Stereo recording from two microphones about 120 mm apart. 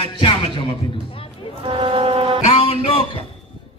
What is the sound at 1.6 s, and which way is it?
Music, 50° right (ahead or behind).